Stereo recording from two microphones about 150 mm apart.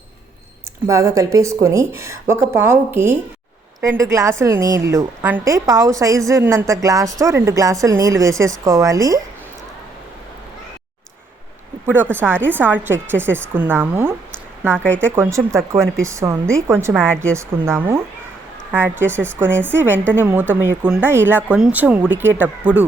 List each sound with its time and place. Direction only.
0.9 s a woman's voice: 20° right (ahead or behind)
12.1 s a woman's voice: 15° right (ahead or behind)
14.8 s speech: 10° left (ahead or behind)
15.1 s a woman's voice: 20° right (ahead or behind)